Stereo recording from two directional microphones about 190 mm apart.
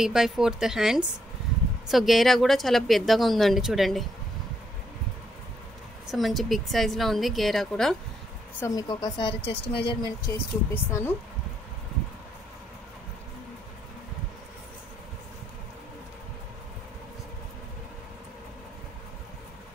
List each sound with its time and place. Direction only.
0.0 s speech: 5° right (ahead or behind)
6.0 s speech: centre (ahead or behind)
8.5 s speech: 20° left (ahead or behind)